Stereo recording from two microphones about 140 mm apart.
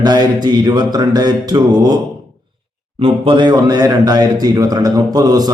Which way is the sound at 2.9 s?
40° right (ahead or behind).